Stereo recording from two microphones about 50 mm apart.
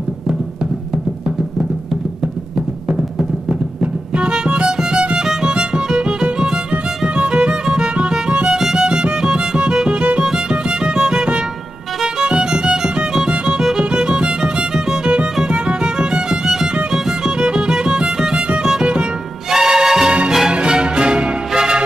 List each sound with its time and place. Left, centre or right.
2.5 s music: centre
8.5 s music: centre